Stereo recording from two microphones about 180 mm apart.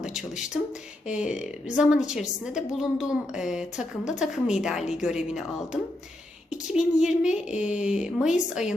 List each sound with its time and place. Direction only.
0.0 s a woman's voice: 5° right (ahead or behind)